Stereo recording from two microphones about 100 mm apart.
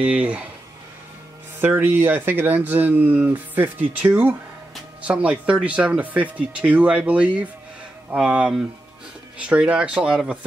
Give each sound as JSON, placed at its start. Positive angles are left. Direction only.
{"t": 0.0, "sound": "speech", "side_deg": -15}
{"t": 1.6, "sound": "speech", "side_deg": -20}